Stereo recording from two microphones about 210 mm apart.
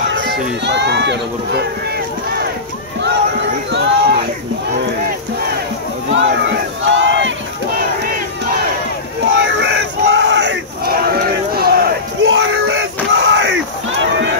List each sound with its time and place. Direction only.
0.1 s speech: 55° right (ahead or behind)
3.0 s a sound: 55° right (ahead or behind)
6.1 s crowd: 60° right (ahead or behind)
9.2 s battle cry: 60° right (ahead or behind)
12.3 s a sound: 55° right (ahead or behind)
13.2 s battle cry: 60° right (ahead or behind)